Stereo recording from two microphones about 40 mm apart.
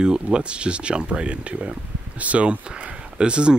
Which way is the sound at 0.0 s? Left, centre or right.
Right.